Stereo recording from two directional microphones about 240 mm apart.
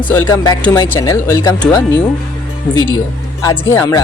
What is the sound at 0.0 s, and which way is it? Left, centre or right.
Speech, centre.